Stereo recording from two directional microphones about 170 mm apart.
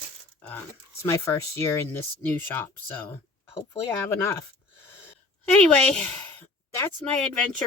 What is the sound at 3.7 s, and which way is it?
Speech, 15° left (ahead or behind).